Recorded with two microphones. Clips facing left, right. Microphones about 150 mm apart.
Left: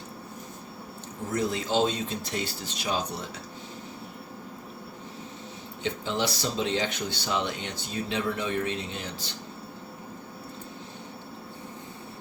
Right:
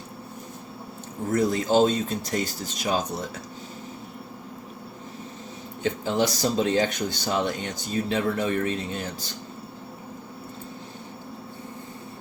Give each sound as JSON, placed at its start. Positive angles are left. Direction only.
{"t": 1.3, "sound": "speech", "side_deg": -45}
{"t": 5.8, "sound": "speech", "side_deg": -45}